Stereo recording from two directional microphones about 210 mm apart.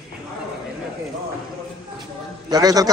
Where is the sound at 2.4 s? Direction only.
20° right (ahead or behind).